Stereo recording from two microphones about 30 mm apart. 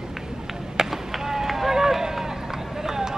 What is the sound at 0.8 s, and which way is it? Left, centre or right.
Run, centre.